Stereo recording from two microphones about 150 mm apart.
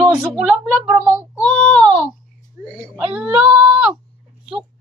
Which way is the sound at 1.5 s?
5° left (ahead or behind).